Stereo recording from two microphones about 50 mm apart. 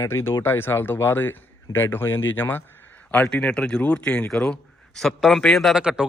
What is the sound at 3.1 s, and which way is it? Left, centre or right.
A man's voice, left.